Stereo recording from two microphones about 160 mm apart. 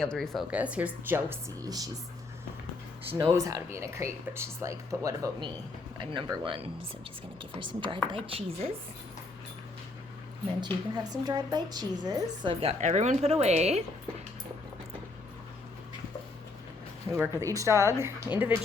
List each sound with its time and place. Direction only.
0.0 s speech: 5° left (ahead or behind)
0.5 s speech: 10° right (ahead or behind)
3.1 s a woman's voice: 20° right (ahead or behind); by 8.7 s 35° right (ahead or behind)
10.6 s a woman's voice: 25° right (ahead or behind); by 13.8 s 40° right (ahead or behind)
17.1 s speech: 20° right (ahead or behind)